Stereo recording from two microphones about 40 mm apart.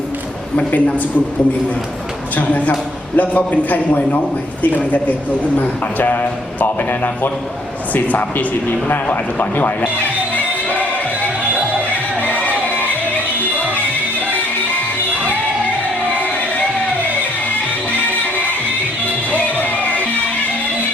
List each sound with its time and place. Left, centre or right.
0.5 s a man's voice: left
2.3 s a man's voice: left
9.0 s music: left
12.2 s music: left
19.3 s music: left